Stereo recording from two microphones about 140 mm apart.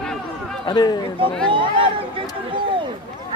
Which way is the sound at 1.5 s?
40° right (ahead or behind).